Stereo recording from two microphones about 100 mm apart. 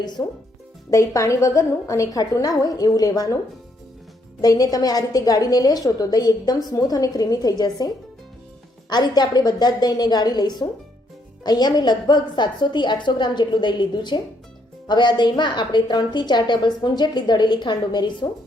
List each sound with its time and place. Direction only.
0.2 s a woman's voice: 30° left (ahead or behind)
4.4 s a woman's voice: 40° left (ahead or behind)
8.9 s a woman's voice: 45° left (ahead or behind)